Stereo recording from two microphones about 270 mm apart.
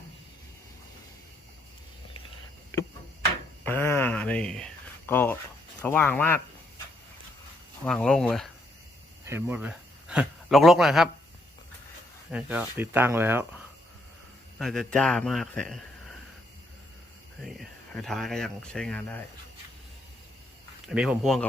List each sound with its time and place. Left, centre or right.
3.6 s a sound: centre
5.8 s speech: centre
7.9 s a man's voice: centre
12.3 s speech: centre
14.6 s a man's voice: centre
17.4 s speech: centre
20.8 s a man's voice: centre